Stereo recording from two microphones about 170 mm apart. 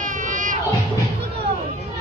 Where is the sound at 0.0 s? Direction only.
50° right (ahead or behind).